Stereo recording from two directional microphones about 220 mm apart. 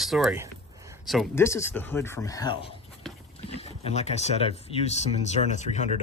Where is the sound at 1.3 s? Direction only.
10° left (ahead or behind).